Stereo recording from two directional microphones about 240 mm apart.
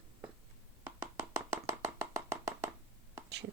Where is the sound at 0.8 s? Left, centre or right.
Centre.